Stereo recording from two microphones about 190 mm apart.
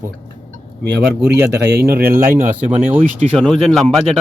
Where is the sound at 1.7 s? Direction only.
55° right (ahead or behind).